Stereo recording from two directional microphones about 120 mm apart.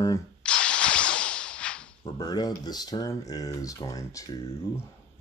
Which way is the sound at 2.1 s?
35° left (ahead or behind).